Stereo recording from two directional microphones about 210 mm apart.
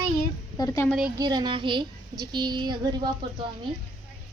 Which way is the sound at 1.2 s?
20° right (ahead or behind).